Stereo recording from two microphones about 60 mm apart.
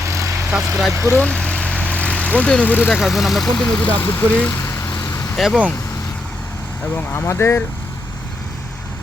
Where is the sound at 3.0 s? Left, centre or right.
Centre.